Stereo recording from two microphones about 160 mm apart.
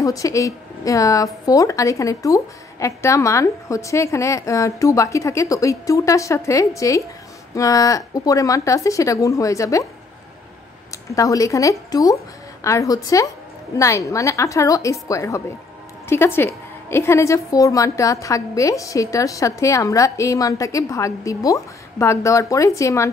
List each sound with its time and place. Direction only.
0.0 s a woman's voice: 20° left (ahead or behind)
10.9 s a woman's voice: 20° left (ahead or behind)